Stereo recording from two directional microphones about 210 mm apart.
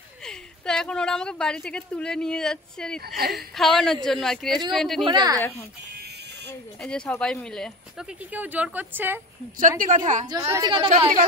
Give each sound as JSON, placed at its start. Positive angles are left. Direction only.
{"t": 0.2, "sound": "a woman's voice", "side_deg": 5}
{"t": 5.0, "sound": "a woman's voice", "side_deg": -20}
{"t": 5.9, "sound": "buzzer", "side_deg": -50}
{"t": 6.8, "sound": "a woman's voice", "side_deg": 5}
{"t": 9.6, "sound": "a woman's voice", "side_deg": -40}
{"t": 10.2, "sound": "a woman's voice", "side_deg": -20}